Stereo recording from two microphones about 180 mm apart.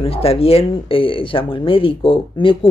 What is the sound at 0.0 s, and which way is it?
Speech, 35° left (ahead or behind).